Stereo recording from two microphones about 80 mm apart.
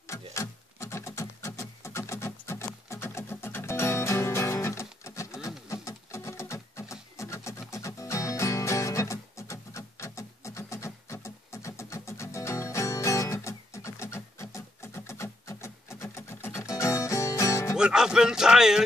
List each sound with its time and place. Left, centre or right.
0.0 s a sound: left
5.7 s rub: left
7.7 s music: left
17.7 s speech: centre